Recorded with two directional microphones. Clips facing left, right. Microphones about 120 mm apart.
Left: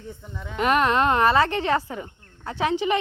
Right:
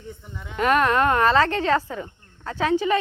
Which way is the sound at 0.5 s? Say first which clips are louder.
Right 1 dB; 20° left (ahead or behind).